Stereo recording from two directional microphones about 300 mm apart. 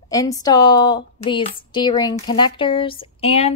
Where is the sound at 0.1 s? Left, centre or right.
Centre.